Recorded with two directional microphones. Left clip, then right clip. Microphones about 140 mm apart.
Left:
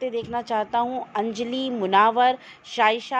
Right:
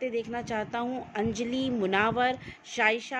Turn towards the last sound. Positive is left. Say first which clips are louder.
# left 6 dB
turn(degrees=10)  # may be behind; listen again after turning